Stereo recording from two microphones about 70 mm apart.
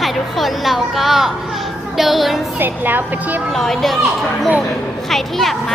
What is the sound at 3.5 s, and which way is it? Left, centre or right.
Speech, centre.